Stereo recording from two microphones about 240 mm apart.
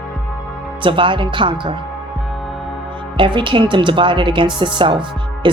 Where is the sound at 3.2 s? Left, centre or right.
Centre.